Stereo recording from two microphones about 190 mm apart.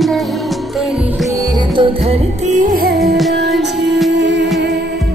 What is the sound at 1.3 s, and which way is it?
Music, 20° right (ahead or behind).